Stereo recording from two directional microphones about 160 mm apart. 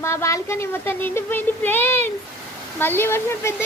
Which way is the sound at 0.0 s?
20° left (ahead or behind).